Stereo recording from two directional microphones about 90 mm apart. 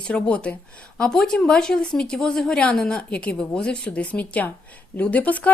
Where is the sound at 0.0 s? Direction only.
10° left (ahead or behind).